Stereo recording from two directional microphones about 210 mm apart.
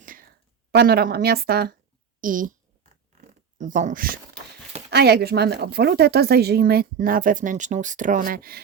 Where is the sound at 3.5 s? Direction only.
35° right (ahead or behind).